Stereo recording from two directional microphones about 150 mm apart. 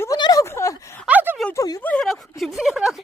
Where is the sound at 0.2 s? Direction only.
25° left (ahead or behind).